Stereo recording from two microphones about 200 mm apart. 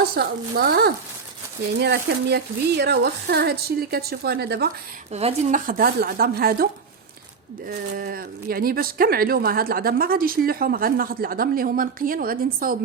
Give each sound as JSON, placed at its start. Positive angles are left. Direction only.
{"t": 0.0, "sound": "speech", "side_deg": -50}
{"t": 5.1, "sound": "speech", "side_deg": -35}
{"t": 7.7, "sound": "speech", "side_deg": -50}